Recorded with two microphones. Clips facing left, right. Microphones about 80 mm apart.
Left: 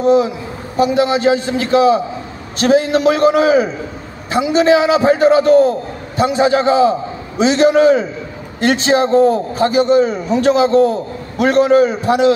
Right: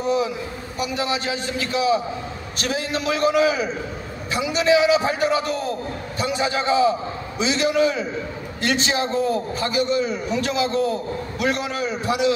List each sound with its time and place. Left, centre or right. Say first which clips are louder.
0.7 s a man's voice: left 11 dB; left